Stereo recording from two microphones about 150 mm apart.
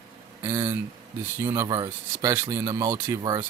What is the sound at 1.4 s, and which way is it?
Speech, 20° right (ahead or behind).